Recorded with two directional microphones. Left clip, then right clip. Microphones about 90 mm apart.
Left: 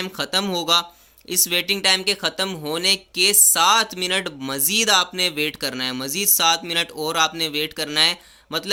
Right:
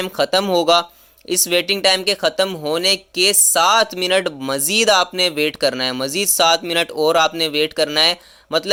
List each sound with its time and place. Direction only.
0.0 s speech: 40° right (ahead or behind)